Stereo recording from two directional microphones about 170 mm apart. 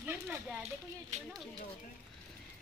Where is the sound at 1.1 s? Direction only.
45° right (ahead or behind).